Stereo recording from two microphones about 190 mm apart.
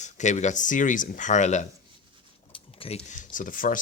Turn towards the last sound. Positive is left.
turn(degrees=45)  # may be behind; listen again after turning